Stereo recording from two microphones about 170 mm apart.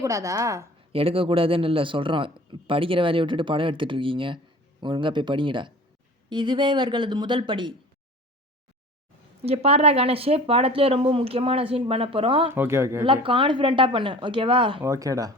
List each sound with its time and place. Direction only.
0.0 s a woman's voice: 20° right (ahead or behind)
0.9 s a man's voice: 35° right (ahead or behind)
9.4 s a man's voice: 35° right (ahead or behind)
12.5 s a woman's voice: 15° right (ahead or behind)
13.2 s speech: 30° right (ahead or behind)
14.8 s speech: 20° right (ahead or behind)